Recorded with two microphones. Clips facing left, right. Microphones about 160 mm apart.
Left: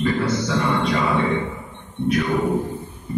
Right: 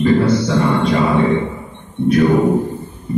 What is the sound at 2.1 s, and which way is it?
Music, 35° right (ahead or behind).